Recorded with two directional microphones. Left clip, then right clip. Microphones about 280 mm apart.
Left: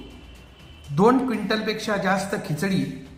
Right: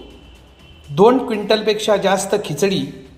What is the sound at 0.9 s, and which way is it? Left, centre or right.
A man's voice, left.